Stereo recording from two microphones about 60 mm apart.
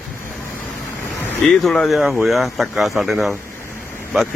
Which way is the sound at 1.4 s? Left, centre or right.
Centre.